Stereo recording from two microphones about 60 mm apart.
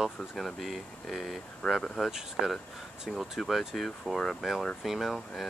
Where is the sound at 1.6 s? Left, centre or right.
Centre.